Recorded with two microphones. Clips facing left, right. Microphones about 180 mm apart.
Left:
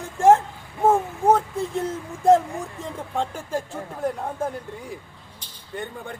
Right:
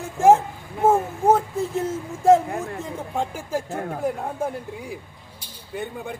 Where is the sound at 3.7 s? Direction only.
65° right (ahead or behind).